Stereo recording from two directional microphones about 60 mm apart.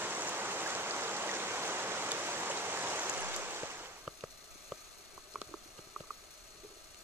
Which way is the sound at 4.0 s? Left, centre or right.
Centre.